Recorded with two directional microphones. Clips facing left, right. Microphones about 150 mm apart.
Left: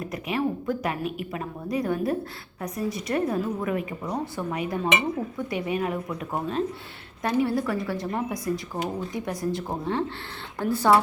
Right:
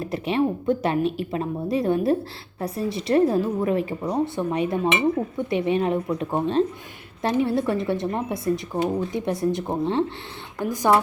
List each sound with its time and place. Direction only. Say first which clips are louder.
0.0 s speech: right 4 dB; 30° right (ahead or behind)